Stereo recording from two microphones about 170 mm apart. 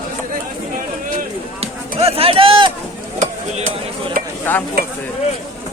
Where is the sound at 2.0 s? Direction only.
35° right (ahead or behind).